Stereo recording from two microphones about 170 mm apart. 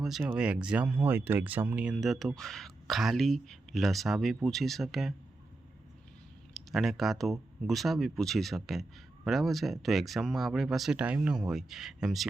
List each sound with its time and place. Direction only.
0.0 s speech: centre (ahead or behind)
6.5 s speech: centre (ahead or behind)